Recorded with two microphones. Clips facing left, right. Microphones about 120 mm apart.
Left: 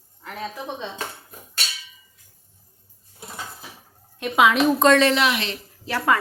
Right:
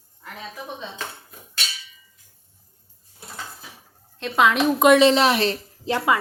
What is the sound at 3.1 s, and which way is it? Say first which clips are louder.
Dishes: left 1 dB; 15° left (ahead or behind).